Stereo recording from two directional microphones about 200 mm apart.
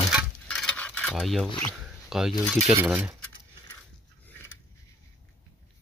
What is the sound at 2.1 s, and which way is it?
Speech, centre (ahead or behind).